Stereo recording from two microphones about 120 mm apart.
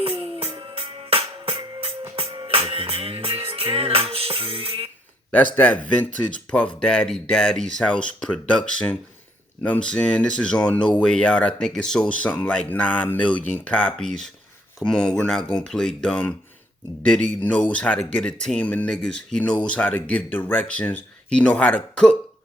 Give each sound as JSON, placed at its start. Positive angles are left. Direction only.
{"t": 0.0, "sound": "music", "side_deg": -50}
{"t": 5.3, "sound": "speech", "side_deg": 15}